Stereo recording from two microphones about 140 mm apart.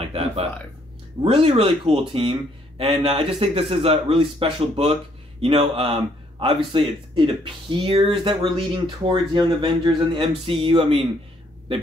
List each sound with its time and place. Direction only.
1.2 s a man's voice: 45° right (ahead or behind)